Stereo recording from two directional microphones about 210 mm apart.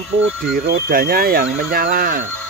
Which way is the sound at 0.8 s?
45° right (ahead or behind).